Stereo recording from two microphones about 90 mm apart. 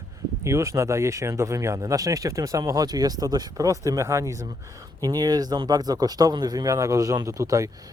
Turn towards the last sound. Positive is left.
turn(degrees=-40)  # may be behind; listen again after turning